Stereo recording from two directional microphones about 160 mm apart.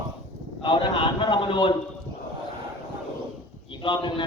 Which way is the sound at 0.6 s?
30° left (ahead or behind).